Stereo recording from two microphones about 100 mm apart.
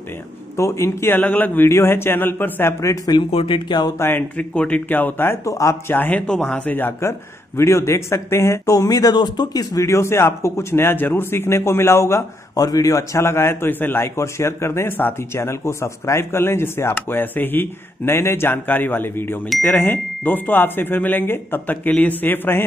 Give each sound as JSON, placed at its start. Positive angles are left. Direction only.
{"t": 0.6, "sound": "a man's voice", "side_deg": 30}
{"t": 3.3, "sound": "speech", "side_deg": 65}
{"t": 4.4, "sound": "speech", "side_deg": 15}
{"t": 5.4, "sound": "speech", "side_deg": 35}
{"t": 5.9, "sound": "a man's voice", "side_deg": 20}
{"t": 6.2, "sound": "a man's voice", "side_deg": 10}
{"t": 9.8, "sound": "a man's voice", "side_deg": 30}